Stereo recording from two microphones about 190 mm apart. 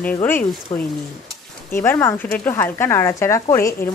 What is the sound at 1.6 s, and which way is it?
Speech, 10° left (ahead or behind).